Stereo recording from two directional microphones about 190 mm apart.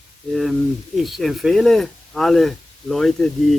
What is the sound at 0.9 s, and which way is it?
Speech, centre (ahead or behind).